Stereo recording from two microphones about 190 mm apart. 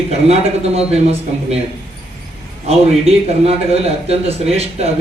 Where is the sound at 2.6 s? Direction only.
35° right (ahead or behind).